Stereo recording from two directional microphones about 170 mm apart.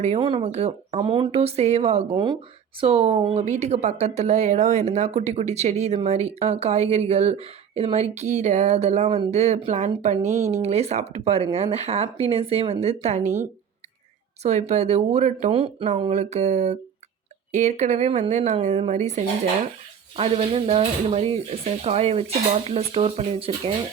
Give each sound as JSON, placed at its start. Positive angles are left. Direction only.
{"t": 0.2, "sound": "speech", "side_deg": -30}
{"t": 14.4, "sound": "speech", "side_deg": -40}